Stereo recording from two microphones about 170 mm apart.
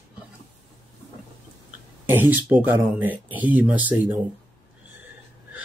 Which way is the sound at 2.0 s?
10° right (ahead or behind).